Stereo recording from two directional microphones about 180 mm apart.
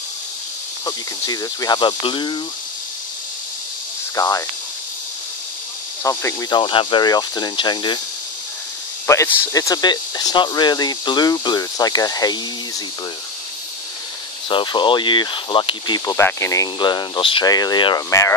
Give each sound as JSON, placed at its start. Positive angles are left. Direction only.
{"t": 0.8, "sound": "speech", "side_deg": 20}
{"t": 4.1, "sound": "speech", "side_deg": 20}
{"t": 6.0, "sound": "speech", "side_deg": 20}
{"t": 9.0, "sound": "speech", "side_deg": 15}
{"t": 14.5, "sound": "speech", "side_deg": 25}
{"t": 16.2, "sound": "speech", "side_deg": 15}